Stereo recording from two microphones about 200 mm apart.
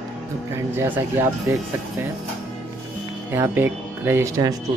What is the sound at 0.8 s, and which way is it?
Speech, 10° right (ahead or behind).